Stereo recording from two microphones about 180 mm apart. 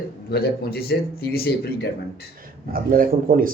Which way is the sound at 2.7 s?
50° right (ahead or behind).